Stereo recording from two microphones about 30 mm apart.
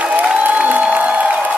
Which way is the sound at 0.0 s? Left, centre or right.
Right.